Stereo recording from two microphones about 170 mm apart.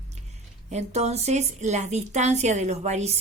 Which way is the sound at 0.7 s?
40° right (ahead or behind).